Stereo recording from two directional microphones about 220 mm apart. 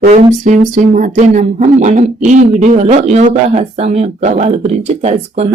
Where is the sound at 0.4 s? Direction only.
35° right (ahead or behind).